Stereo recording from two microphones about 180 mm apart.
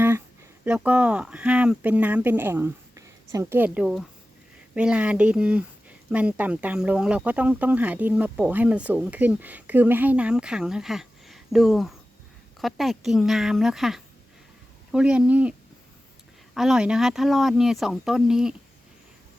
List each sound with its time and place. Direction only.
0.6 s speech: 5° right (ahead or behind)
16.6 s speech: 5° right (ahead or behind)